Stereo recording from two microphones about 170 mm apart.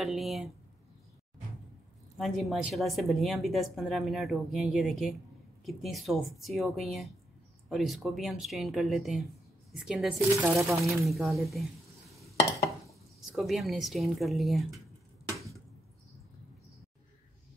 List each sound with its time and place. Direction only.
0.0 s speech: centre (ahead or behind)
2.1 s speech: centre (ahead or behind)
10.3 s speech: 15° right (ahead or behind)
10.8 s speech: centre (ahead or behind)
15.2 s a sound: 20° right (ahead or behind)